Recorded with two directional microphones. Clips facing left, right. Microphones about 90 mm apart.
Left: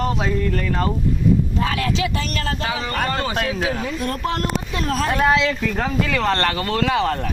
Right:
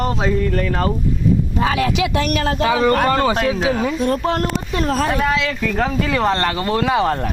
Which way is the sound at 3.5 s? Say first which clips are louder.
Right 4 dB; 20° right (ahead or behind).